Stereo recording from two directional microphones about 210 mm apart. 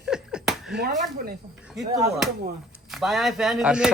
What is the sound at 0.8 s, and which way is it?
Speech, 45° right (ahead or behind).